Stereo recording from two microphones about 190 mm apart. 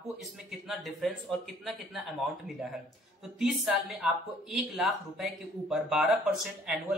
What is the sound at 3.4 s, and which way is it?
Speech, centre (ahead or behind).